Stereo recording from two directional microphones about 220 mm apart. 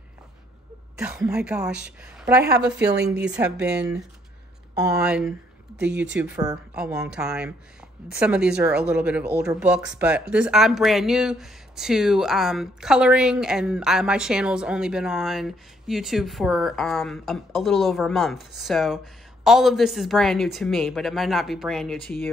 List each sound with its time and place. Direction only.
0.9 s speech: 5° right (ahead or behind)
2.8 s a woman's voice: 50° right (ahead or behind)
3.4 s speech: 5° right (ahead or behind)